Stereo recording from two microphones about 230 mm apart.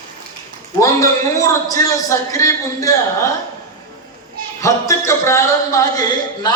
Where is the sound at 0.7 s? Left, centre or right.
Centre.